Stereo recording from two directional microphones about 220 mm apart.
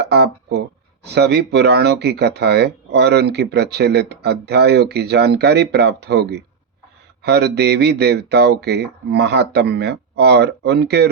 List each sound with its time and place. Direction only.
0.0 s speech: 50° right (ahead or behind)